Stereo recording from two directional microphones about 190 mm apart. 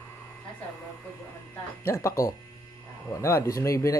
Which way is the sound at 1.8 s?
15° left (ahead or behind).